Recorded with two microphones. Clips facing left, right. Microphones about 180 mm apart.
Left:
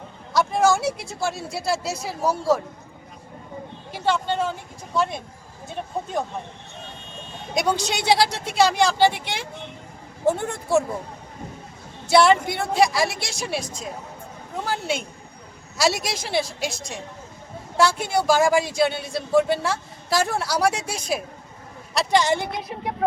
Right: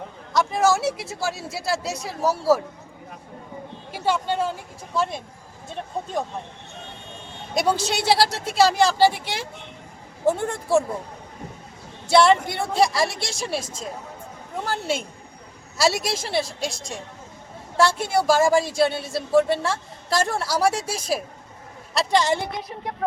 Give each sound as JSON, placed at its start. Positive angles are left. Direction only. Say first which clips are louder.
{"t": 0.3, "sound": "speech", "louder": "left 1 dB", "side_deg": 0}
{"t": 3.9, "sound": "speech", "louder": "even", "side_deg": -10}
{"t": 7.5, "sound": "speech", "louder": "right 1 dB", "side_deg": -5}
{"t": 12.0, "sound": "speech", "louder": "even", "side_deg": 0}